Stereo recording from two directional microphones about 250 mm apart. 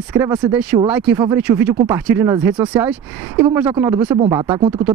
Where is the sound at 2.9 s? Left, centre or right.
Centre.